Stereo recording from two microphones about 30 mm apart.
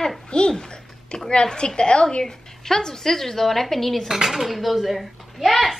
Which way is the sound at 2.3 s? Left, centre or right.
Centre.